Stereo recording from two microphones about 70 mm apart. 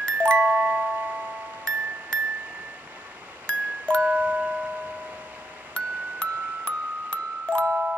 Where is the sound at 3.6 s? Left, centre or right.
Right.